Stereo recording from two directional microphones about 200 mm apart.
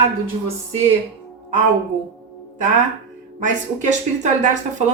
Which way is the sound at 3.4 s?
35° right (ahead or behind).